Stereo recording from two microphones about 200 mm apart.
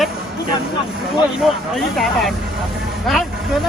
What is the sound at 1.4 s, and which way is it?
Speech, centre (ahead or behind).